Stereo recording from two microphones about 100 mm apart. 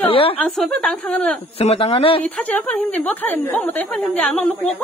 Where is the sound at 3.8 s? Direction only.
5° left (ahead or behind).